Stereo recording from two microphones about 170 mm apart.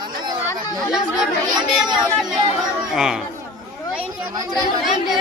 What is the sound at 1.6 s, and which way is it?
Speech, 25° right (ahead or behind).